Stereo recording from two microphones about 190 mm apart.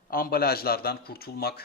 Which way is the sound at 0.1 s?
50° left (ahead or behind).